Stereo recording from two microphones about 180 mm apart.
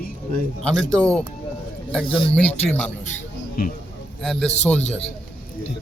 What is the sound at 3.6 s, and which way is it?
Speech, 55° left (ahead or behind).